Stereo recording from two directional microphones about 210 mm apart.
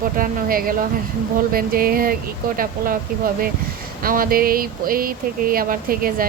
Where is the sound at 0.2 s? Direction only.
45° right (ahead or behind).